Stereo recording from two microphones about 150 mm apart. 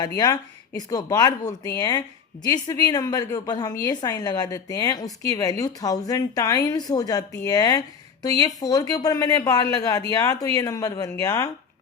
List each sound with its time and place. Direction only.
0.0 s a woman's voice: 25° left (ahead or behind)